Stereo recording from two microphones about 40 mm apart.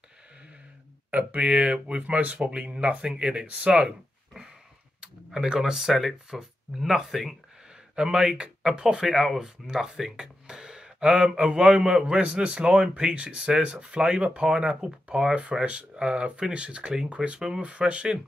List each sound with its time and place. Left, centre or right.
1.1 s speech: right
5.0 s speech: centre
7.9 s speech: centre